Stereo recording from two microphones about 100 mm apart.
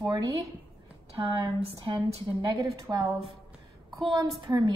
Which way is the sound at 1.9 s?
50° right (ahead or behind).